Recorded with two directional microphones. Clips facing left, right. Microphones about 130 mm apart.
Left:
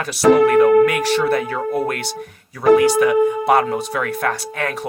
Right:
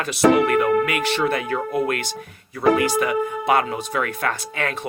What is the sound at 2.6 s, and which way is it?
Speech, 55° left (ahead or behind).